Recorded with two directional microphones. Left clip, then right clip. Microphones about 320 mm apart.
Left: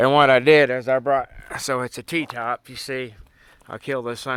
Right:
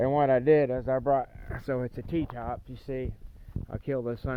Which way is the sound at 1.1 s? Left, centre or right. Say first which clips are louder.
Left 6 dB; centre.